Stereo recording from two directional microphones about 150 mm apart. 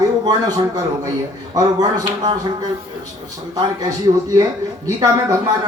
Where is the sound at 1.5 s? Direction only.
25° right (ahead or behind).